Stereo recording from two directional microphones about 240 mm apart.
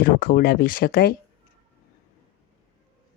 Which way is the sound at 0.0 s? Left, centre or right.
Left.